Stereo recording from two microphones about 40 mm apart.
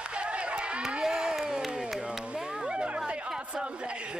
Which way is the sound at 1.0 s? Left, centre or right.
Centre.